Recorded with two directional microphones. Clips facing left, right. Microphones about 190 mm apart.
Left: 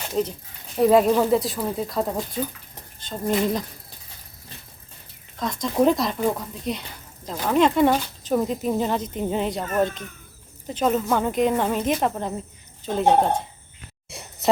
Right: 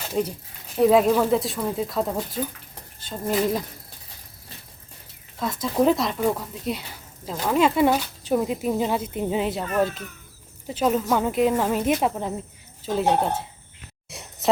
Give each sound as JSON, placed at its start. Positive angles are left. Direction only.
{"t": 0.1, "sound": "speech", "side_deg": -5}
{"t": 5.4, "sound": "speech", "side_deg": -5}
{"t": 14.1, "sound": "a sound", "side_deg": 0}